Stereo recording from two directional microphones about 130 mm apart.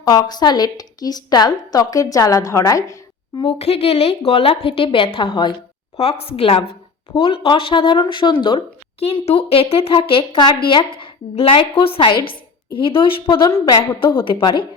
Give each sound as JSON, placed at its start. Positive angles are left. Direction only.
{"t": 0.0, "sound": "a woman's voice", "side_deg": 30}
{"t": 3.4, "sound": "a woman's voice", "side_deg": 50}